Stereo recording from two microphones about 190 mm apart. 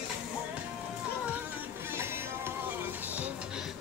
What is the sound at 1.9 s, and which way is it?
Music, 10° right (ahead or behind).